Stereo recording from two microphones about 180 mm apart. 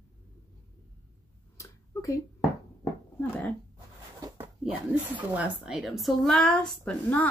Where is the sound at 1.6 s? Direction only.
15° left (ahead or behind).